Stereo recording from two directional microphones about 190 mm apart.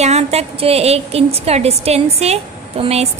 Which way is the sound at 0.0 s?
35° right (ahead or behind).